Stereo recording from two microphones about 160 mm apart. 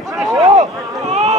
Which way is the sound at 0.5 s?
45° right (ahead or behind).